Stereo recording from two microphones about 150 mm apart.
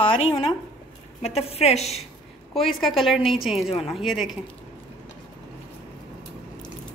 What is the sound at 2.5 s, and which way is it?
A woman's voice, centre (ahead or behind).